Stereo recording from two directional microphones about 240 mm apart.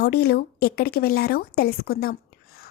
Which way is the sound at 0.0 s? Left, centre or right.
Left.